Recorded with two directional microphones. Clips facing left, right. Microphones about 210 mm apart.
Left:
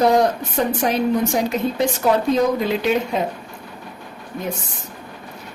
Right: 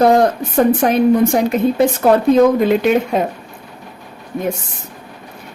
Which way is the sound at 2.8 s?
55° right (ahead or behind).